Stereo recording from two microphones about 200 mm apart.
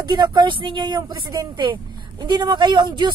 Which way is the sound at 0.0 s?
20° right (ahead or behind).